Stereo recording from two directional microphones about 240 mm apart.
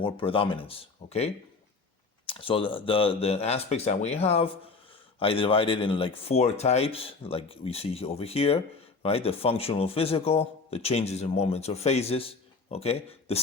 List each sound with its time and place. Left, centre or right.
0.0 s speech: left
2.2 s speech: left